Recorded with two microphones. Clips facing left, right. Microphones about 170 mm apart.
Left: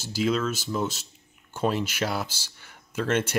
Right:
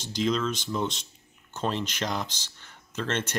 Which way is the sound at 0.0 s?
5° left (ahead or behind).